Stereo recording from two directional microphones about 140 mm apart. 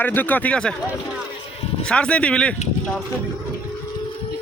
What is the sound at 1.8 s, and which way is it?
Speech, 5° left (ahead or behind).